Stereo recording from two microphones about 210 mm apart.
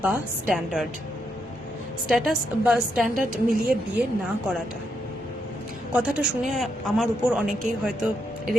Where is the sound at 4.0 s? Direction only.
50° right (ahead or behind).